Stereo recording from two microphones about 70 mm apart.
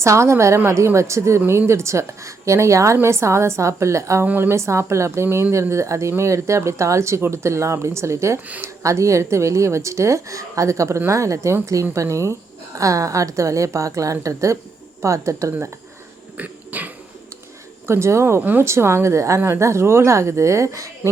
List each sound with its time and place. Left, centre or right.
0.0 s speech: right
4.3 s speech: right
16.4 s cough: right
17.8 s a woman's voice: right